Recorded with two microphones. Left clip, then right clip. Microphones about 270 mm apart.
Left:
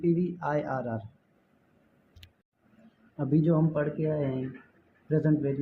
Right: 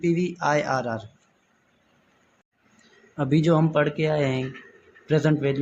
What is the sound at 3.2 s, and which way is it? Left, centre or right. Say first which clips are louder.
Speech: right 5 dB; right.